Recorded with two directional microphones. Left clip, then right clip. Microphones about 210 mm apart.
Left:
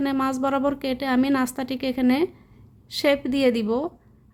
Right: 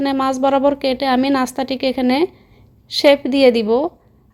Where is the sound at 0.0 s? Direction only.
5° right (ahead or behind).